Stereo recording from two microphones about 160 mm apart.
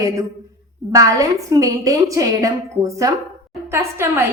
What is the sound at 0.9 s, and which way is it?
A woman's voice, 20° right (ahead or behind).